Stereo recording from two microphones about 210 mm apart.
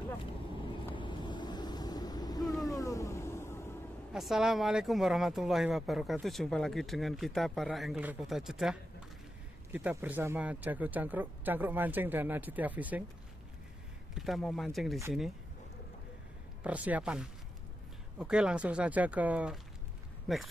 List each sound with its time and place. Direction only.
0.9 s boat: 20° left (ahead or behind)
2.7 s vehicle: 15° left (ahead or behind)
4.1 s speech: centre (ahead or behind)
14.1 s speech: centre (ahead or behind)
16.6 s speech: 5° right (ahead or behind)